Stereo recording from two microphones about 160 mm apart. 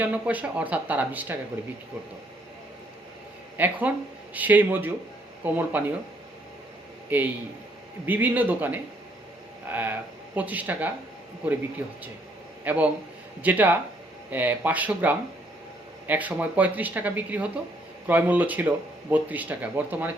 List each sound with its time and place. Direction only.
0.0 s speech: 10° right (ahead or behind)
3.6 s speech: 10° right (ahead or behind)
7.1 s speech: 10° right (ahead or behind)
12.6 s speech: 10° right (ahead or behind)